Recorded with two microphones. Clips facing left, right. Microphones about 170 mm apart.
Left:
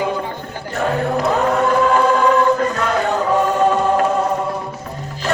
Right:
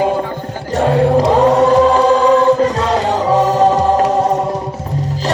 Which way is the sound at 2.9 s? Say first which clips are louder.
Right 3 dB; 90° right.